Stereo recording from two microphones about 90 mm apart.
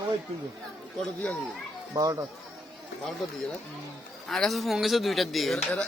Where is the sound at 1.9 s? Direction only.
40° right (ahead or behind).